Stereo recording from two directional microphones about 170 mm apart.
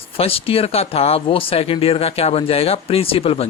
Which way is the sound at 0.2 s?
35° left (ahead or behind).